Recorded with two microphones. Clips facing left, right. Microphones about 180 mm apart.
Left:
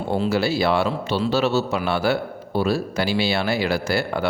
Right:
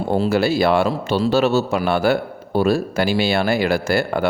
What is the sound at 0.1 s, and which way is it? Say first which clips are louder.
A man's voice: right 3 dB; 45° right (ahead or behind).